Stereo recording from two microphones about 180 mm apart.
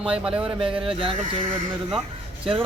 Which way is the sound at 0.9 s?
30° right (ahead or behind).